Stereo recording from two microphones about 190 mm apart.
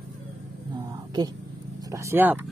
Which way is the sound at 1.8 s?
15° right (ahead or behind).